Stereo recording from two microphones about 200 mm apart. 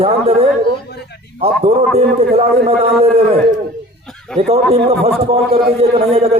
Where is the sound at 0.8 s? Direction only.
55° left (ahead or behind).